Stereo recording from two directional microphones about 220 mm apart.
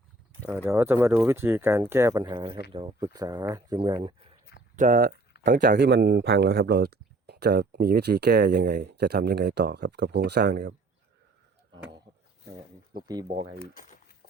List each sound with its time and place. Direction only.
0.5 s speech: 10° right (ahead or behind)
4.8 s speech: 40° right (ahead or behind)
12.5 s speech: 20° right (ahead or behind)
13.2 s speech: 30° right (ahead or behind)